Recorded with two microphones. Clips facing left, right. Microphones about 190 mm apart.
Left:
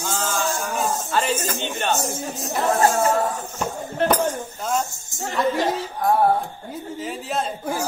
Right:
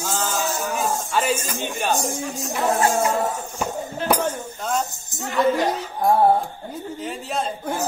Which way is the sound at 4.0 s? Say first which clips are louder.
Left 2 dB; 60° left (ahead or behind).